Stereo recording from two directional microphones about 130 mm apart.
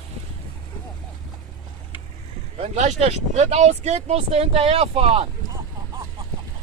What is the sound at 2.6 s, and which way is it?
Speech, 60° right (ahead or behind).